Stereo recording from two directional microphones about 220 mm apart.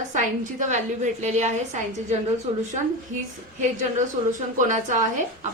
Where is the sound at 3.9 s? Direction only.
35° right (ahead or behind).